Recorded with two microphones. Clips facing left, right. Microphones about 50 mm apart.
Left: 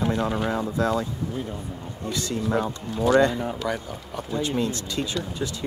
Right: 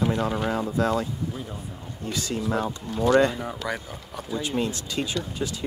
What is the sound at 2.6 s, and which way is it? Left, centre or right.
Speech, centre.